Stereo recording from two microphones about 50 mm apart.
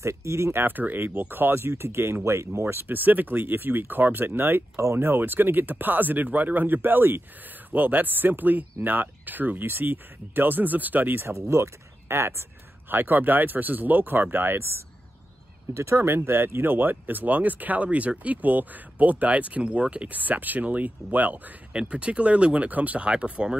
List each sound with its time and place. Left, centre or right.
0.0 s speech: right
0.6 s speech: right
11.2 s speech: right
12.9 s speech: right
15.7 s speech: right
21.7 s speech: right